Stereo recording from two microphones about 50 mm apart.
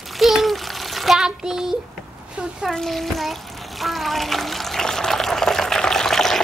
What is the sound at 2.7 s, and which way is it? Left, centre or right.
Speech, centre.